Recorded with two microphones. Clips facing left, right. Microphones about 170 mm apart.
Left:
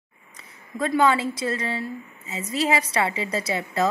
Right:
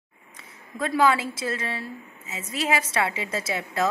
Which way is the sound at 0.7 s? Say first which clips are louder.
Left 1 dB; centre (ahead or behind).